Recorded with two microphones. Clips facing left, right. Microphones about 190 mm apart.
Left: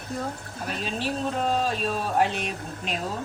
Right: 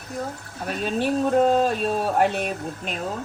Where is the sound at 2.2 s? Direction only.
55° right (ahead or behind).